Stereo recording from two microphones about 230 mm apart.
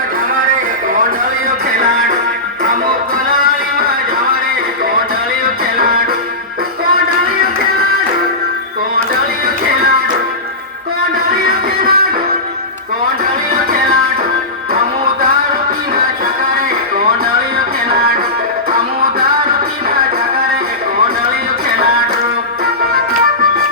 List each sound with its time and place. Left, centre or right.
5.7 s music: right
11.4 s music: right